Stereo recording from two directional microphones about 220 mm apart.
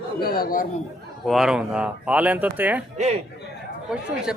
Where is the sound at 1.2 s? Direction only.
Centre (ahead or behind).